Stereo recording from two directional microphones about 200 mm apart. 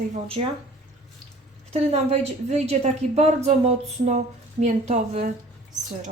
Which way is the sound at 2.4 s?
35° right (ahead or behind).